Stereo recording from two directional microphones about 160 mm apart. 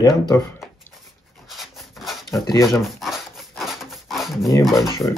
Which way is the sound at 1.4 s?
Centre (ahead or behind).